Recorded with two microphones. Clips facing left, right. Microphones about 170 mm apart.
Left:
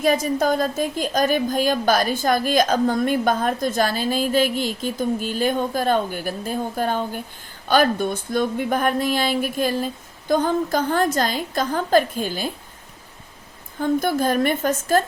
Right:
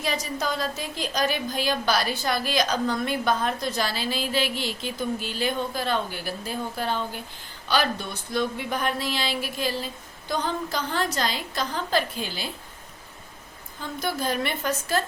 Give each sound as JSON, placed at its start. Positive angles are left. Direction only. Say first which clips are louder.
{"t": 0.0, "sound": "a woman's voice", "louder": "left 9 dB", "side_deg": 50}
{"t": 13.7, "sound": "a woman's voice", "louder": "left 10 dB", "side_deg": 50}